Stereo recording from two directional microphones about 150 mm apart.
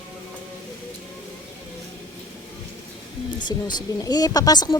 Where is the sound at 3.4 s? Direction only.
30° left (ahead or behind).